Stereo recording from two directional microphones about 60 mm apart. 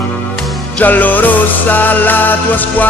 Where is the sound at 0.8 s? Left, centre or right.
Left.